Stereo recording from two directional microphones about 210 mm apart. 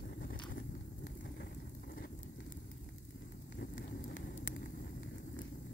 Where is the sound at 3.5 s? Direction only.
45° left (ahead or behind).